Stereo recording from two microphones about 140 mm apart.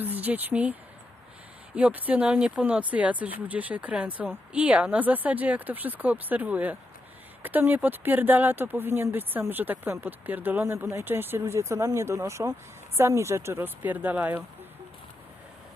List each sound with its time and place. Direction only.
0.0 s speech: 10° right (ahead or behind)